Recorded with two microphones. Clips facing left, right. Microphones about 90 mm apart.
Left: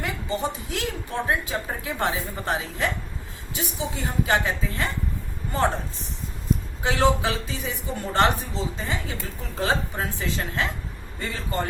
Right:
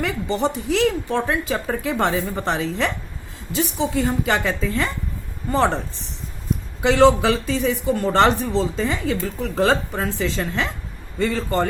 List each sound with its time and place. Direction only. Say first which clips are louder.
0.0 s a woman's voice: right 6 dB; 75° right (ahead or behind)
3.5 s speech: right 9 dB; 90° right